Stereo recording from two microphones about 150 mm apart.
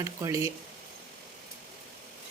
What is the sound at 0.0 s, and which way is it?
Speech, 20° right (ahead or behind).